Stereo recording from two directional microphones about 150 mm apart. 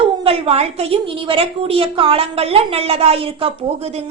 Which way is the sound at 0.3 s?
40° right (ahead or behind).